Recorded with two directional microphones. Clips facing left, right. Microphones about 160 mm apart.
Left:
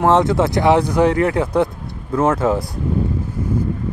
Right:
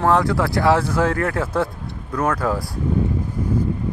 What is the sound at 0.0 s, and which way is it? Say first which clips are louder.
Speech: left 3 dB; 20° left (ahead or behind).